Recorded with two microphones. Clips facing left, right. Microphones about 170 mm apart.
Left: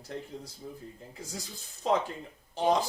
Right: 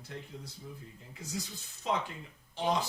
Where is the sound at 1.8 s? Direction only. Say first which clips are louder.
Left 6 dB; 40° left (ahead or behind).